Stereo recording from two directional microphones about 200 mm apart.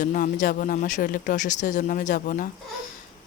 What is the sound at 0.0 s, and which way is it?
Speech, 40° left (ahead or behind).